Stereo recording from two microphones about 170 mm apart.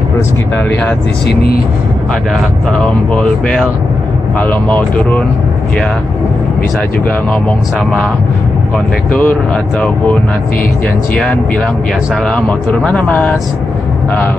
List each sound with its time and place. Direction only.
1.2 s speech: 65° left (ahead or behind)
3.2 s speech: 5° left (ahead or behind)
8.7 s speech: 10° left (ahead or behind)
12.3 s speech: 5° left (ahead or behind)